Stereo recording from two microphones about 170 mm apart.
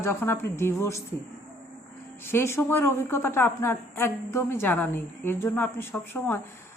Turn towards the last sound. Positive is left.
turn(degrees=15)  # may be behind; listen again after turning